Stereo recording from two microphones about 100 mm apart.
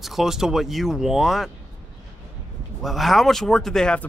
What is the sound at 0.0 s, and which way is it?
Speech, 5° right (ahead or behind).